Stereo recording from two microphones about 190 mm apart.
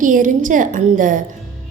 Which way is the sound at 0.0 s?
45° right (ahead or behind).